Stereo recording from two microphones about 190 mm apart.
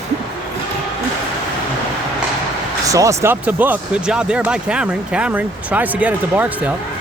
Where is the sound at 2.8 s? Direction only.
15° right (ahead or behind).